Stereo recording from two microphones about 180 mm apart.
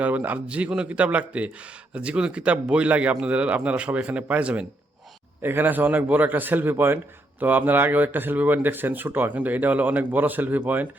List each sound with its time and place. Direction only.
0.0 s a man's voice: 10° right (ahead or behind)